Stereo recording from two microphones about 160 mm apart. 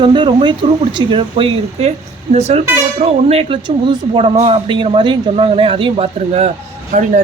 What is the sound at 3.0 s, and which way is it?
Speech, 40° right (ahead or behind).